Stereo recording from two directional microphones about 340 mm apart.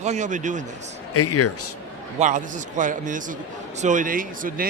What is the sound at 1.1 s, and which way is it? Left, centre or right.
Speech, left.